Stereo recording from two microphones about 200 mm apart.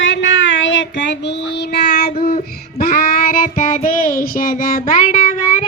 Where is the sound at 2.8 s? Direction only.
50° left (ahead or behind).